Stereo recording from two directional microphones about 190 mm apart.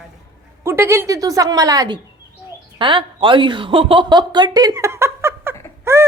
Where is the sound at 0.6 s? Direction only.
15° right (ahead or behind).